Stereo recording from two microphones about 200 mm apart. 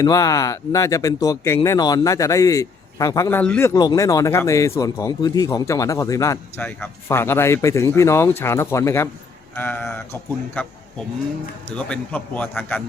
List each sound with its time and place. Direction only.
0.0 s a man's voice: 15° left (ahead or behind)